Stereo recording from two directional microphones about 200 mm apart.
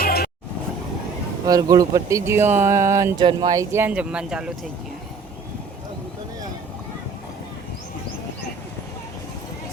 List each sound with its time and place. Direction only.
0.0 s vehicle: 50° left (ahead or behind)
1.5 s speech: 20° right (ahead or behind)